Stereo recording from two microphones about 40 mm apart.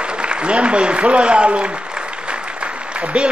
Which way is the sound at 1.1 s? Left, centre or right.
Right.